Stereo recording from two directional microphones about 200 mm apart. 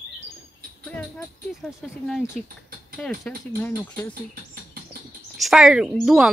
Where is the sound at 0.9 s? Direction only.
10° left (ahead or behind).